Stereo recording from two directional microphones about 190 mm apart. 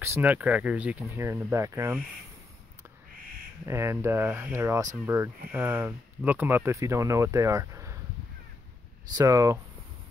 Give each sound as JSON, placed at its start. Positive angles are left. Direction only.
{"t": 0.0, "sound": "speech", "side_deg": -10}
{"t": 3.6, "sound": "speech", "side_deg": -15}
{"t": 9.1, "sound": "speech", "side_deg": -15}